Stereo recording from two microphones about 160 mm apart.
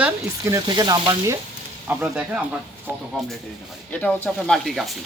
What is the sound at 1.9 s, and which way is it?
Speech, 10° right (ahead or behind).